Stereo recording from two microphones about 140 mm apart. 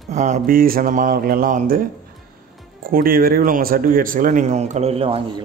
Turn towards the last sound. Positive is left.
turn(degrees=-45)  # may be behind; listen again after turning